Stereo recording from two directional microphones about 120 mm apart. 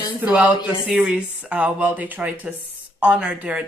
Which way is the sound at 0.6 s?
45° left (ahead or behind).